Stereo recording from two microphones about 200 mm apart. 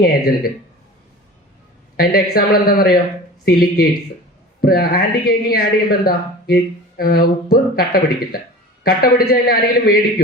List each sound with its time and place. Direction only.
0.0 s a woman's voice: 50° left (ahead or behind)
2.0 s a woman's voice: 50° left (ahead or behind)